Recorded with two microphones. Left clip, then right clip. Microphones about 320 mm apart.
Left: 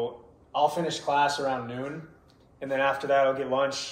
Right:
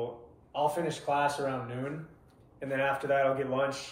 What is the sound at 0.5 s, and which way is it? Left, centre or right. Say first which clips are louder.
Speech: left 5 dB; centre.